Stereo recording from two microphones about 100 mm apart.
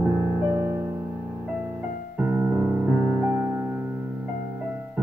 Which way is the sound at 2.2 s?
15° right (ahead or behind).